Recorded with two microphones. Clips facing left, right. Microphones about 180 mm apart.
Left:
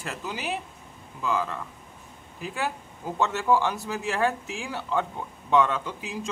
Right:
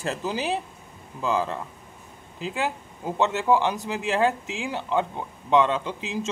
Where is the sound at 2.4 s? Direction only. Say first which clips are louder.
Right 3 dB; 20° right (ahead or behind).